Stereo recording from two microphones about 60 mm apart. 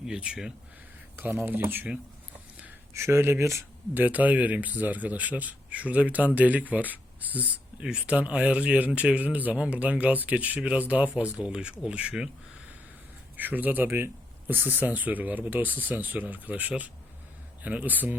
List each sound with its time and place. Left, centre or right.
0.0 s speech: centre
1.5 s speech: right
2.9 s speech: right
3.9 s speech: right
7.8 s speech: centre
13.3 s speech: right